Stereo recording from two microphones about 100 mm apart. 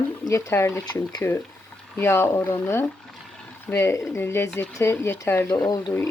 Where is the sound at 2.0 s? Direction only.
25° left (ahead or behind).